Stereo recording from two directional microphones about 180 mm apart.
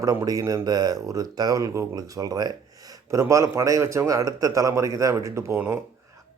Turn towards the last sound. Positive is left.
turn(degrees=-15)  # may be behind; listen again after turning